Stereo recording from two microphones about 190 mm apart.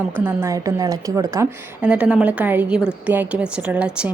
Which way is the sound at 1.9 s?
5° right (ahead or behind).